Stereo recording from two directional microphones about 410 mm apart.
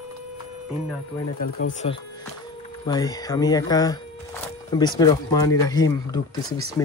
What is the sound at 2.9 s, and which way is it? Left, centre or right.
Speech, centre.